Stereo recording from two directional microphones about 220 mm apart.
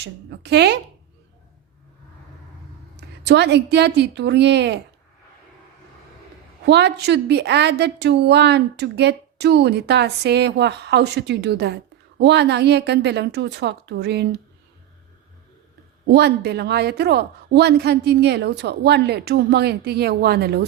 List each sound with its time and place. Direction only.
0.0 s a woman's voice: 50° right (ahead or behind)
3.2 s a woman's voice: 50° right (ahead or behind)
6.7 s a woman's voice: 50° right (ahead or behind)
16.1 s a woman's voice: 50° right (ahead or behind)